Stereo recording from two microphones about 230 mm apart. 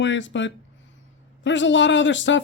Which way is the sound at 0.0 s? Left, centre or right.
Left.